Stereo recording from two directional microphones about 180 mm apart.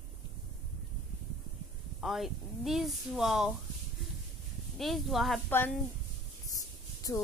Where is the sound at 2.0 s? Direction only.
Centre (ahead or behind).